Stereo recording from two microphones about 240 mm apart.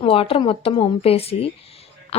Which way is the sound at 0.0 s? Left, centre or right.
Left.